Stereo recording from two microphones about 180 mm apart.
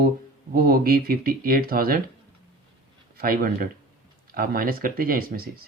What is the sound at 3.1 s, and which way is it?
Speech, 55° right (ahead or behind).